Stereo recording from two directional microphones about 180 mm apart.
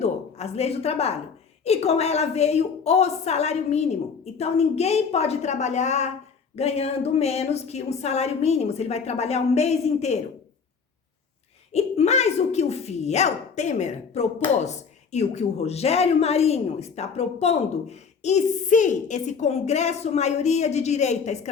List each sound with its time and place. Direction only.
0.0 s a sound: 35° left (ahead or behind)
1.6 s speech: 35° left (ahead or behind)
11.7 s speech: 35° left (ahead or behind)